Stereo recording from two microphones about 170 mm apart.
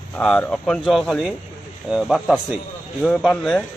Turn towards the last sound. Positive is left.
turn(degrees=5)  # may be behind; listen again after turning